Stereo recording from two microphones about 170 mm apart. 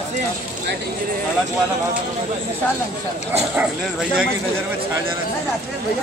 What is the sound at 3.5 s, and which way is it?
Speech, 5° right (ahead or behind).